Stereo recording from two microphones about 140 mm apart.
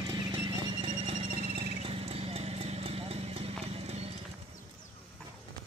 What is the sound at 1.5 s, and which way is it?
Horse, 45° right (ahead or behind).